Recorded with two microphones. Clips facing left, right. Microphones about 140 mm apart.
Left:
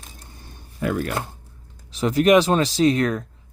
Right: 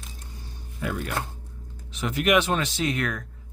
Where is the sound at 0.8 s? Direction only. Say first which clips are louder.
Left 7 dB; 50° left (ahead or behind).